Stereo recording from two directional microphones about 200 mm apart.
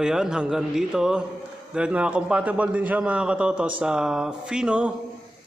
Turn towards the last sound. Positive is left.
turn(degrees=-5)  # may be behind; listen again after turning